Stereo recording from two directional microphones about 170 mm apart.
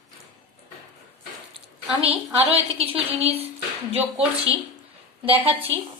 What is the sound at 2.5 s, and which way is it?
Speech, 35° right (ahead or behind).